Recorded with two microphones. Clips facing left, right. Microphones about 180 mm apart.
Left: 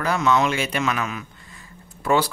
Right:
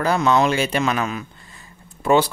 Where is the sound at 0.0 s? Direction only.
35° right (ahead or behind).